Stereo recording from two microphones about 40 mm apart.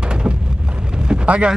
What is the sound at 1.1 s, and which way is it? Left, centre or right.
Boat, right.